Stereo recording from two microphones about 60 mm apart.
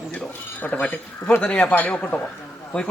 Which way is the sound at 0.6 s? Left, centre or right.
Left.